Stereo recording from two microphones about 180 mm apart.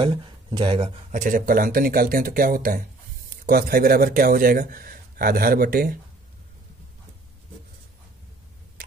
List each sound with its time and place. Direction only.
0.0 s speech: 25° right (ahead or behind)
1.1 s speech: 45° right (ahead or behind)